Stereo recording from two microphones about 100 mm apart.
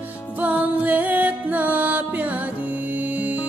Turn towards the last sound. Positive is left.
turn(degrees=-15)  # may be behind; listen again after turning